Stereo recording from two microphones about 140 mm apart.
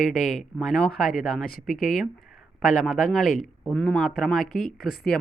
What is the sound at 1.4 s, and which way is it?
Speech, 85° left.